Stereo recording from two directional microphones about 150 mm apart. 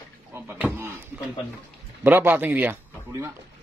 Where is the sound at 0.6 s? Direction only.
10° left (ahead or behind).